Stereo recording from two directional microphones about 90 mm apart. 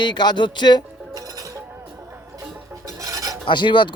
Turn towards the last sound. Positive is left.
turn(degrees=60)  # may be behind; listen again after turning